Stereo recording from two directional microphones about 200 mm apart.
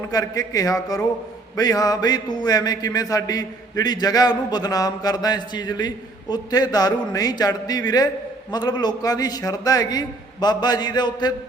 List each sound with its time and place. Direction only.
0.1 s a man's voice: 20° left (ahead or behind)